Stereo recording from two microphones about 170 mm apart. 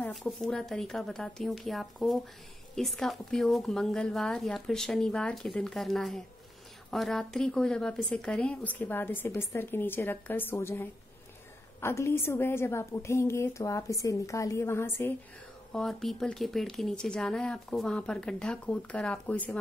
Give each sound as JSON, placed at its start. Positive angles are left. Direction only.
{"t": 0.0, "sound": "a woman's voice", "side_deg": 0}
{"t": 15.7, "sound": "speech", "side_deg": 0}